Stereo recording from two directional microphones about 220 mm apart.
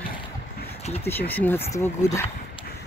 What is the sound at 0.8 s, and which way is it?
Speech, 30° left (ahead or behind).